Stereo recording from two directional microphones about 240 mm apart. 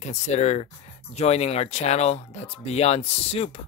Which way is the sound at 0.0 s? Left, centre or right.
Left.